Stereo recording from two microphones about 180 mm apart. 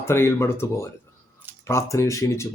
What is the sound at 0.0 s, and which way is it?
Speech, 15° left (ahead or behind).